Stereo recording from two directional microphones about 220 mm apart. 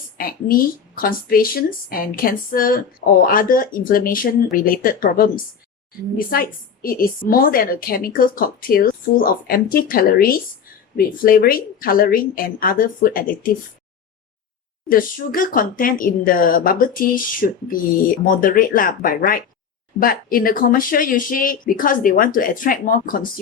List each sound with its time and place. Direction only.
0.2 s a woman's voice: 40° left (ahead or behind)
6.3 s a woman's voice: 40° left (ahead or behind)
14.8 s a woman's voice: 40° left (ahead or behind)